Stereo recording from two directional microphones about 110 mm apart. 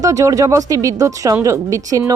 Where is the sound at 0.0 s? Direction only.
30° right (ahead or behind).